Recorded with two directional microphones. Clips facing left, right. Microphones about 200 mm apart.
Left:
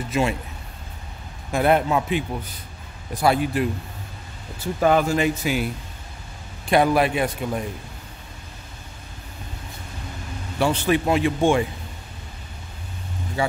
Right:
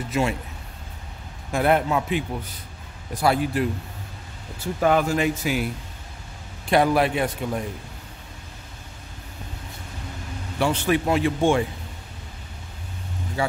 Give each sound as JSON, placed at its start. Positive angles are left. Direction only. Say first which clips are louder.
{"t": 0.1, "sound": "speech", "louder": "left 1 dB", "side_deg": 20}
{"t": 1.5, "sound": "speech", "louder": "left 1 dB", "side_deg": 20}
{"t": 4.7, "sound": "speech", "louder": "left 1 dB", "side_deg": 30}
{"t": 6.7, "sound": "a man's voice", "louder": "left 1 dB", "side_deg": 15}
{"t": 10.6, "sound": "a man's voice", "louder": "left 1 dB", "side_deg": 35}
{"t": 11.1, "sound": "a man's voice", "louder": "left 1 dB", "side_deg": 15}